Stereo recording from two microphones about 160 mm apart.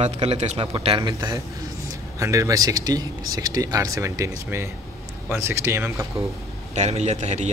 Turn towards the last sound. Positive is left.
turn(degrees=-45)  # may be behind; listen again after turning